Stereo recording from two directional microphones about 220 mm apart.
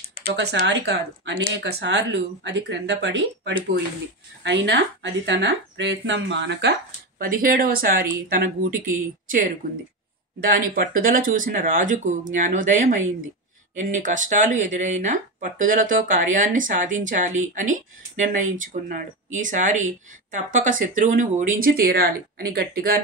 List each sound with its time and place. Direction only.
0.7 s speech: 50° right (ahead or behind)
7.2 s speech: 40° right (ahead or behind)